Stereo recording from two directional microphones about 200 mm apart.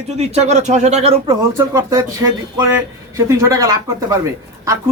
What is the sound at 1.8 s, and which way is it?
Speech, 15° right (ahead or behind).